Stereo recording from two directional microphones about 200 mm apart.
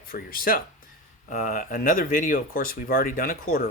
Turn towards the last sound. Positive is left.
turn(degrees=45)  # may be behind; listen again after turning